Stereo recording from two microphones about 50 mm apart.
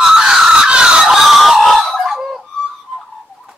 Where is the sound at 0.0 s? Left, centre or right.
Centre.